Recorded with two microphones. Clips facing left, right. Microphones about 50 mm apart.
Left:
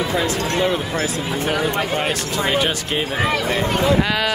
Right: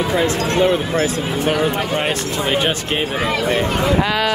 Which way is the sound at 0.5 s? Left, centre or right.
Right.